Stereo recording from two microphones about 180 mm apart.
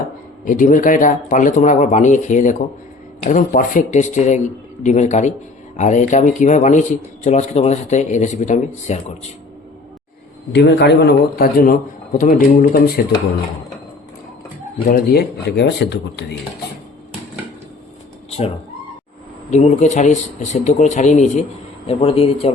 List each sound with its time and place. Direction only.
0.4 s a man's voice: 45° left (ahead or behind)
10.5 s speech: 70° left (ahead or behind); by 12.8 s 50° left (ahead or behind)
14.8 s speech: 55° left (ahead or behind)
18.3 s cat: 35° left (ahead or behind)
19.5 s a man's voice: 40° left (ahead or behind)